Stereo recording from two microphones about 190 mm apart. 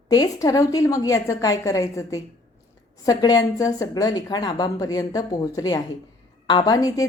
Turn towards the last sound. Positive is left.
turn(degrees=20)  # may be behind; listen again after turning